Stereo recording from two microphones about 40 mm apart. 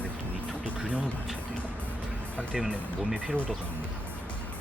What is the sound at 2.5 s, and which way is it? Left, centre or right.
Speech, centre.